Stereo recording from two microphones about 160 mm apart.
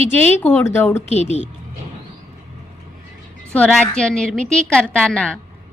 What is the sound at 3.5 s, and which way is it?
A woman's voice, 5° left (ahead or behind).